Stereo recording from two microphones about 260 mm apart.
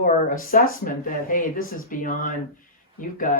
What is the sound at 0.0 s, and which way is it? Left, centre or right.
Speech, left.